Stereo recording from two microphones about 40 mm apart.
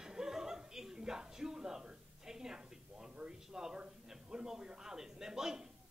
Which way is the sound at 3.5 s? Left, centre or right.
Centre.